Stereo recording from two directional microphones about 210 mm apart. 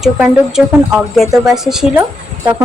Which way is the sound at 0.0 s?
5° right (ahead or behind).